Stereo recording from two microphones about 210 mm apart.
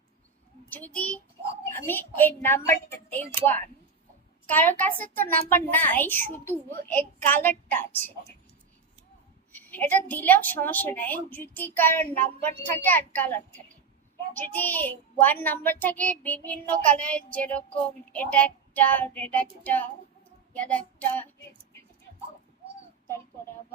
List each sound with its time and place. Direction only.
0.9 s a woman's voice: 5° left (ahead or behind)
9.5 s a woman's voice: 10° left (ahead or behind)